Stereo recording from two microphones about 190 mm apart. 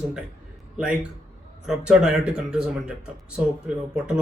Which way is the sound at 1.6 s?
5° right (ahead or behind).